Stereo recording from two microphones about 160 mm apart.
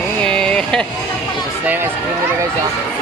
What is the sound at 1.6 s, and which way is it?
Speech, 10° right (ahead or behind).